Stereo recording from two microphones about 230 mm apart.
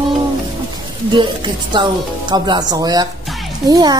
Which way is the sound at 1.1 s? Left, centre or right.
Centre.